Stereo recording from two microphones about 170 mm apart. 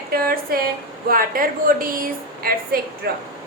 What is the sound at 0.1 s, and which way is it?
Speech, 60° right (ahead or behind).